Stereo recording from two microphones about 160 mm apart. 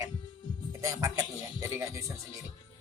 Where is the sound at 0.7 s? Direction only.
20° right (ahead or behind).